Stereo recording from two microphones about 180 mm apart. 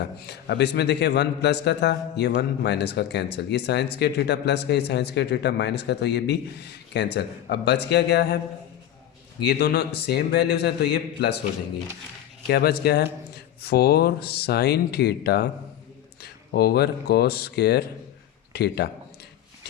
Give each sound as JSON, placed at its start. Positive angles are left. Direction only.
{"t": 0.0, "sound": "a man's voice", "side_deg": 65}
{"t": 9.4, "sound": "a man's voice", "side_deg": 65}
{"t": 12.5, "sound": "a man's voice", "side_deg": 65}